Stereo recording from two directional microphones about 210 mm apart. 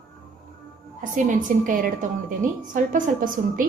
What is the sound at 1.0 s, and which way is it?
A woman's voice, 40° right (ahead or behind).